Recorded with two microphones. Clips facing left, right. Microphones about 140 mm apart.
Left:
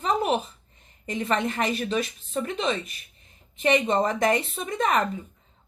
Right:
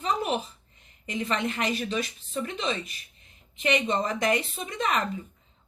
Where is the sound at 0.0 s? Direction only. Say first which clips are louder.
Left 4 dB; 45° left (ahead or behind).